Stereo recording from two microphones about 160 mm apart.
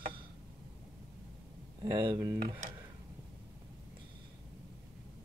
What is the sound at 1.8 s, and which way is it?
Speech, 25° right (ahead or behind).